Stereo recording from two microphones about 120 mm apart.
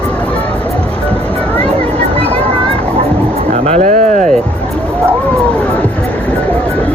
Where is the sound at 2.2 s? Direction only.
55° right (ahead or behind).